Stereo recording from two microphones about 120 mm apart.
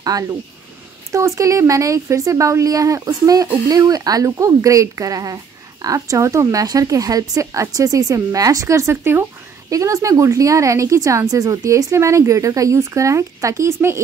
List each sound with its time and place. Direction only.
0.0 s speech: 30° right (ahead or behind)